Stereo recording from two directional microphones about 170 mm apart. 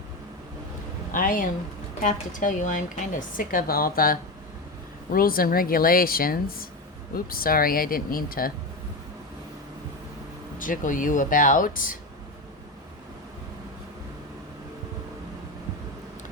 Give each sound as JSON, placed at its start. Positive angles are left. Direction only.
{"t": 1.1, "sound": "a woman's voice", "side_deg": 55}
{"t": 10.6, "sound": "a woman's voice", "side_deg": 50}